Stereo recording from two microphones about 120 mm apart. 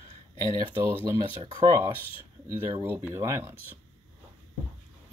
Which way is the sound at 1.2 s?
35° right (ahead or behind).